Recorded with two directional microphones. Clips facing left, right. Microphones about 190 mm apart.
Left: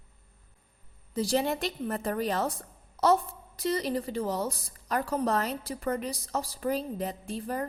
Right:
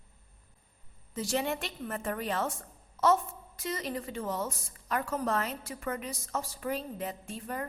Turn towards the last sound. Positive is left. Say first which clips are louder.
# left 5 dB
turn(degrees=35)  # may be behind; listen again after turning